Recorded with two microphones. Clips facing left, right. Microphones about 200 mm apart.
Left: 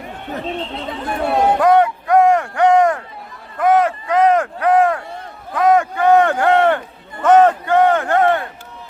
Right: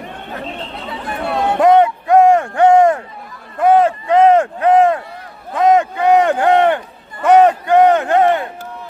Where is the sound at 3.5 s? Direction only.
30° right (ahead or behind).